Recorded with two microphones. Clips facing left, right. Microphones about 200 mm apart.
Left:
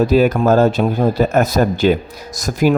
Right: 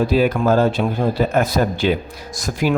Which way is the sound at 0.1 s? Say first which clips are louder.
Left 3 dB; 45° left (ahead or behind).